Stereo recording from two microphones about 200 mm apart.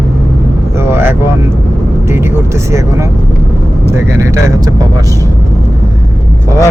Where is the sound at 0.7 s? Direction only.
10° right (ahead or behind).